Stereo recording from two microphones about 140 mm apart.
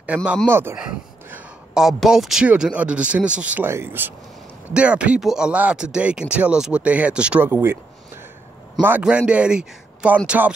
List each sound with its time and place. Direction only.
0.0 s speech: 10° right (ahead or behind)
1.3 s speech: 5° right (ahead or behind)
8.8 s speech: 10° right (ahead or behind)